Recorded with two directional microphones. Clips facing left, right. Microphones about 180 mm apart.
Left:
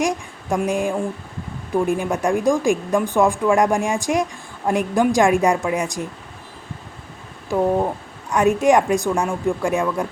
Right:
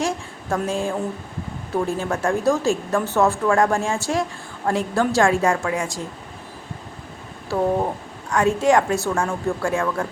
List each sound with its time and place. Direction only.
0.0 s a woman's voice: 15° left (ahead or behind)
8.3 s a woman's voice: 20° left (ahead or behind)